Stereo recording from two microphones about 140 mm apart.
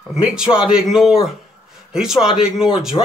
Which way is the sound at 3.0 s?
30° left (ahead or behind).